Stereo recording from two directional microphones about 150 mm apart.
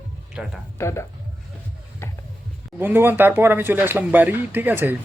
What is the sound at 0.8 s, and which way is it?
Speech, 20° left (ahead or behind).